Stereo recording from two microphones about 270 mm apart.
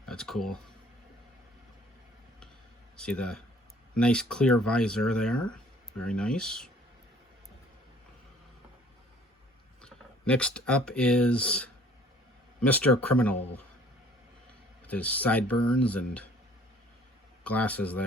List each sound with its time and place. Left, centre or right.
0.0 s speech: centre
2.9 s speech: centre
9.8 s speech: centre
14.8 s speech: centre
17.4 s speech: centre